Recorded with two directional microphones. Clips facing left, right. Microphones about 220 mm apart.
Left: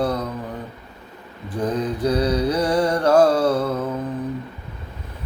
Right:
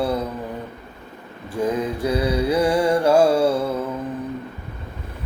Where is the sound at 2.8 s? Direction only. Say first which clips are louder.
Left 2 dB; 10° right (ahead or behind).